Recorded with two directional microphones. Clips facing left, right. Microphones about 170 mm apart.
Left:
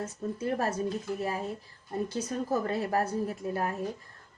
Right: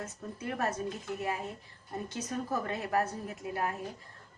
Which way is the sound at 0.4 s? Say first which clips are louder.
Left 3 dB; 35° left (ahead or behind).